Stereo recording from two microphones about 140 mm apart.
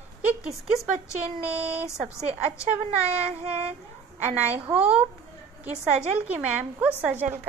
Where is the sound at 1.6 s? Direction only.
45° right (ahead or behind).